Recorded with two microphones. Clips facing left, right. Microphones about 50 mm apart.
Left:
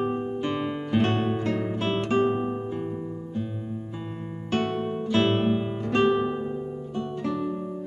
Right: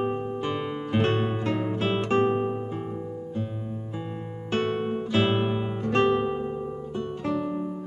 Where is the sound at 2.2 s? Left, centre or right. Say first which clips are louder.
Right 1 dB; centre.